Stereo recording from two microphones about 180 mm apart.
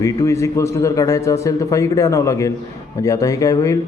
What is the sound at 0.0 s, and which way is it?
Speech, 15° left (ahead or behind).